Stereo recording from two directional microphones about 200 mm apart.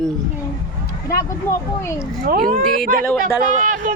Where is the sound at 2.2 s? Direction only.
45° right (ahead or behind).